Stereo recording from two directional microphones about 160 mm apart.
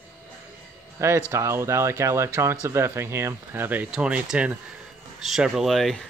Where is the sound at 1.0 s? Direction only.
15° right (ahead or behind).